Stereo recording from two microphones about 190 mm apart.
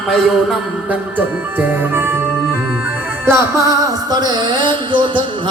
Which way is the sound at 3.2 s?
15° right (ahead or behind).